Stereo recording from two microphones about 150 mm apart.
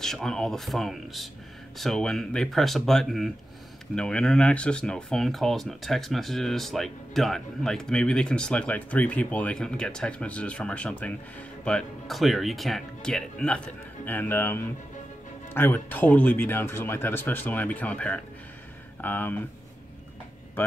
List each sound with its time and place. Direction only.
0.0 s speech: 5° left (ahead or behind)